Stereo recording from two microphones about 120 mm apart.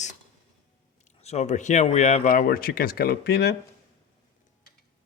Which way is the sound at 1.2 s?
65° left (ahead or behind).